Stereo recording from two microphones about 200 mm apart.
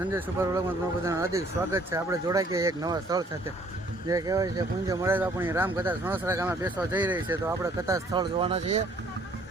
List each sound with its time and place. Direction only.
0.1 s speech: 15° right (ahead or behind); by 8.8 s 30° right (ahead or behind)